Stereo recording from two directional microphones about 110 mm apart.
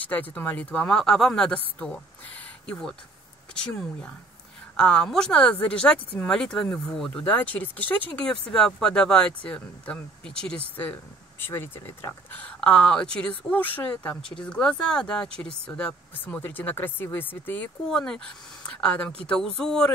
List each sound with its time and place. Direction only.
0.0 s speech: 15° left (ahead or behind)
2.6 s speech: 5° left (ahead or behind)
7.1 s speech: 15° left (ahead or behind)
17.8 s speech: 5° left (ahead or behind)